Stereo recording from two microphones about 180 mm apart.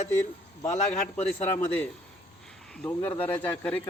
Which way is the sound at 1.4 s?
15° left (ahead or behind).